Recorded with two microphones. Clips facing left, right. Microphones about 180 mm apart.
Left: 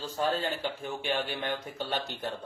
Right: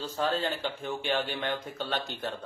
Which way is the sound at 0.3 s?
15° left (ahead or behind).